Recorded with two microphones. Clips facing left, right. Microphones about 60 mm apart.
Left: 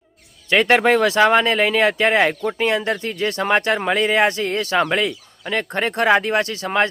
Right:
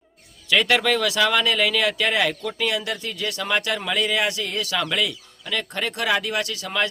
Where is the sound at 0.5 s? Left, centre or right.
Left.